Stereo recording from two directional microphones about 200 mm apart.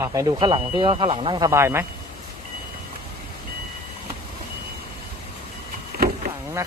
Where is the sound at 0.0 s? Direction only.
15° right (ahead or behind).